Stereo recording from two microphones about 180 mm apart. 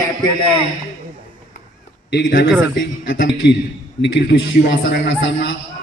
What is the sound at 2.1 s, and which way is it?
Speech, 55° left (ahead or behind).